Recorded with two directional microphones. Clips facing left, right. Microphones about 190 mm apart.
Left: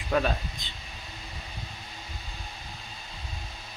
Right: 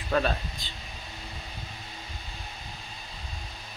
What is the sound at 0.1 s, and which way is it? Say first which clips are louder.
Speech: even; 10° left (ahead or behind).